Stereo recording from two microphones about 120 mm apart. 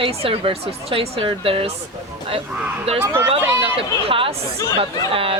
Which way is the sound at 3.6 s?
50° right (ahead or behind).